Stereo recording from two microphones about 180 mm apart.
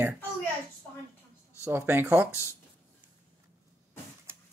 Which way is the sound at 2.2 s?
15° left (ahead or behind).